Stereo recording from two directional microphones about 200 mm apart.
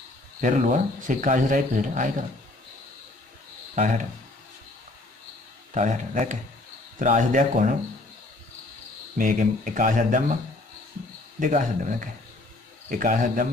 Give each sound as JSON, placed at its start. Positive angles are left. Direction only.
{"t": 0.4, "sound": "speech", "side_deg": -40}
{"t": 3.7, "sound": "speech", "side_deg": -40}
{"t": 5.8, "sound": "speech", "side_deg": -40}
{"t": 9.2, "sound": "speech", "side_deg": -40}
{"t": 11.3, "sound": "a man's voice", "side_deg": -40}